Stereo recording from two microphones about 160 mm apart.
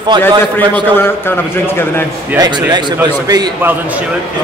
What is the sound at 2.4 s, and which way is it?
A man's voice, 25° right (ahead or behind).